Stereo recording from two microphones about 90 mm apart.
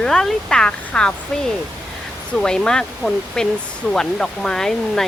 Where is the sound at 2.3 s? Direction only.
10° left (ahead or behind).